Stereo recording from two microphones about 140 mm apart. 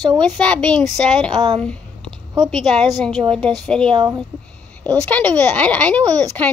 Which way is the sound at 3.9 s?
30° right (ahead or behind).